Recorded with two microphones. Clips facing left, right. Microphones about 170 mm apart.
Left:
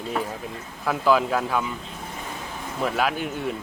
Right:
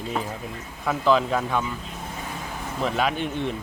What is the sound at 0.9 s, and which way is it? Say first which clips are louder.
Speech: even; 5° left (ahead or behind).